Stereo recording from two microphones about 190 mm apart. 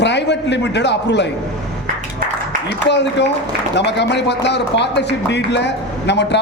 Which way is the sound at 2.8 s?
65° left (ahead or behind).